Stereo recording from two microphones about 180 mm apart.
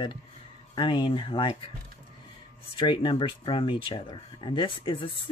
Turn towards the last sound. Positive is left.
turn(degrees=30)  # may be behind; listen again after turning